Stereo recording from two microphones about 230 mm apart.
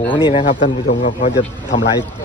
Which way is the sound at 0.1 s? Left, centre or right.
Centre.